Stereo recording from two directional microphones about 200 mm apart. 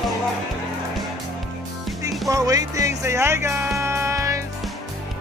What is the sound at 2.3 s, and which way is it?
Music, 15° right (ahead or behind).